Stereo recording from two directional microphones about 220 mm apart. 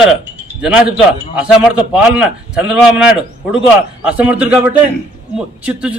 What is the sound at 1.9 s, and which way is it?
A man's voice, 5° right (ahead or behind).